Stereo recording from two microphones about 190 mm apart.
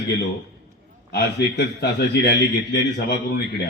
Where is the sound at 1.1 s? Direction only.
60° left (ahead or behind).